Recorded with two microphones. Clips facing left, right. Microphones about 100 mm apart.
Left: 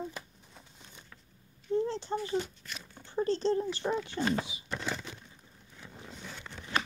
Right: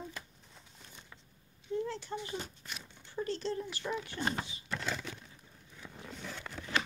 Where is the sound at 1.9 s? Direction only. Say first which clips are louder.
Left 5 dB; 30° left (ahead or behind).